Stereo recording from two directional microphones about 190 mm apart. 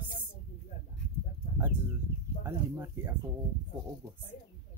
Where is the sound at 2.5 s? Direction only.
15° right (ahead or behind).